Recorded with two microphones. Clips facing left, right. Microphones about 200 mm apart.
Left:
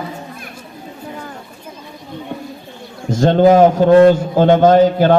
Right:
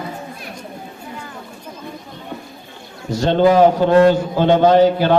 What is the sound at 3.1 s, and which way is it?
A man's voice, 45° left (ahead or behind).